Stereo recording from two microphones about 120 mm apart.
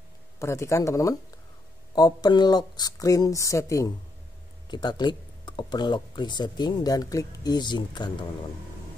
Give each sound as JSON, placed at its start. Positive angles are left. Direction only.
{"t": 0.4, "sound": "speech", "side_deg": 25}
{"t": 4.6, "sound": "speech", "side_deg": 40}